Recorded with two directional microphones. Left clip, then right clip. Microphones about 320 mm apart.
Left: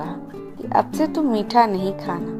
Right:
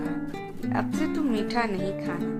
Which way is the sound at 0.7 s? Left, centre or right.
Centre.